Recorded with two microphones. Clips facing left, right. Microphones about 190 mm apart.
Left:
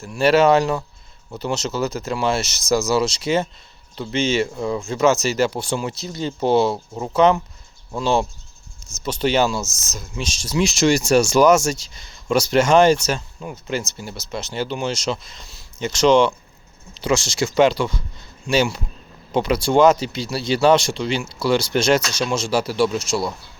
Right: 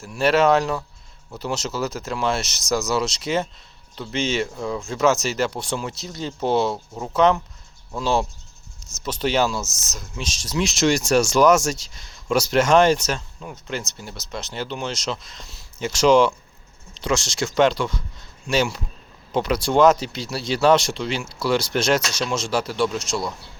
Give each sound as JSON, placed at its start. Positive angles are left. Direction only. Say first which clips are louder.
{"t": 0.0, "sound": "speech", "louder": "left 3 dB", "side_deg": 0}